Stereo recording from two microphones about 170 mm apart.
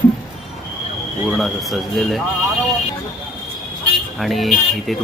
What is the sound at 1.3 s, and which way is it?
Speech, centre (ahead or behind).